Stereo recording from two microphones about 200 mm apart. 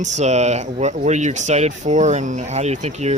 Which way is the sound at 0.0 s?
35° right (ahead or behind).